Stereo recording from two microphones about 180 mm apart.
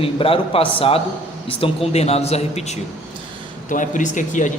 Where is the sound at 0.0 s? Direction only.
30° left (ahead or behind).